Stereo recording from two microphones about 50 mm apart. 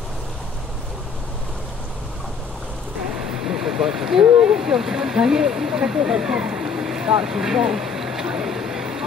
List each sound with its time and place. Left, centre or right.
3.4 s vehicle: centre
4.3 s speech: centre
4.6 s speech: centre